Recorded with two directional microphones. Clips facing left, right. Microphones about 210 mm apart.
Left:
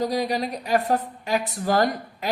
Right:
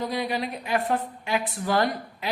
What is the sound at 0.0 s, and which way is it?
A woman's voice, 40° left (ahead or behind).